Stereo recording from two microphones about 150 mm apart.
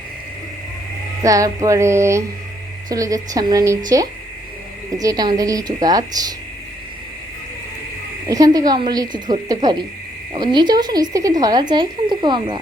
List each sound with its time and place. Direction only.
1.2 s speech: 20° right (ahead or behind)
8.3 s speech: 25° right (ahead or behind)